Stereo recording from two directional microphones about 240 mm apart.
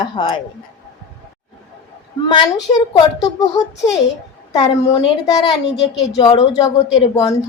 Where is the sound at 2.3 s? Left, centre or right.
Centre.